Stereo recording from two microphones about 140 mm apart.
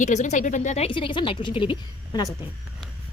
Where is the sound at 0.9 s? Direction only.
35° left (ahead or behind).